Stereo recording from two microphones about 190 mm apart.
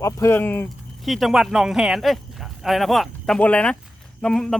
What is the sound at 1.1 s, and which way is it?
Speech, centre (ahead or behind).